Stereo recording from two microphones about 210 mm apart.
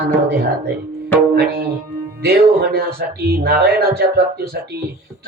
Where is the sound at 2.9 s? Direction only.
50° right (ahead or behind).